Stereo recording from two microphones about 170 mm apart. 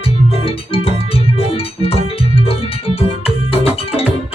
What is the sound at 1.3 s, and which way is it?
Music, 35° left (ahead or behind).